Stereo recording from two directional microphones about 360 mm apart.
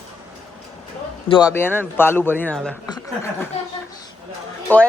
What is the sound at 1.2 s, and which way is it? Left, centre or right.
Speech, centre.